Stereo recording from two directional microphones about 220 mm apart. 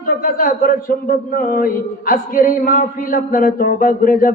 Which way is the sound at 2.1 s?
40° left (ahead or behind).